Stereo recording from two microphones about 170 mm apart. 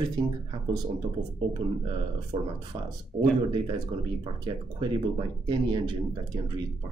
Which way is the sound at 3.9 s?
30° right (ahead or behind).